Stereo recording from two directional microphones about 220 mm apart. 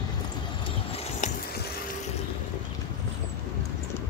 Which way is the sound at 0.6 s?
25° left (ahead or behind).